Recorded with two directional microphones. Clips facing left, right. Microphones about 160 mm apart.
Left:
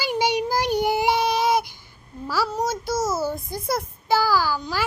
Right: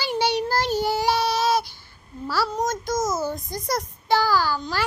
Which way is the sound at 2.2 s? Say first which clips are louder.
Even; 10° left (ahead or behind).